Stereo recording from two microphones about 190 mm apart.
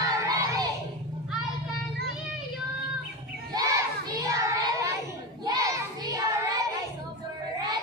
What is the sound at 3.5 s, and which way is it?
Child singing, 20° right (ahead or behind).